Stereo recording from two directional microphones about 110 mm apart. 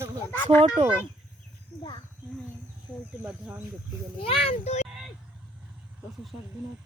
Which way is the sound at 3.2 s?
10° right (ahead or behind).